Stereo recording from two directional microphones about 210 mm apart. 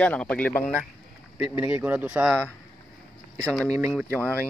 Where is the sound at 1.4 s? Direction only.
5° right (ahead or behind).